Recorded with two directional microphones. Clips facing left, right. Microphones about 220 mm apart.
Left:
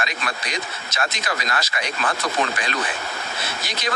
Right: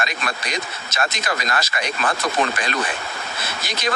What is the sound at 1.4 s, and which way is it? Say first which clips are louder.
Speech: right 2 dB; 45° right (ahead or behind).